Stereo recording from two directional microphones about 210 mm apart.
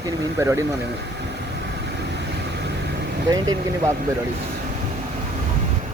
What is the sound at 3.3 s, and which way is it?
Speech, 15° right (ahead or behind).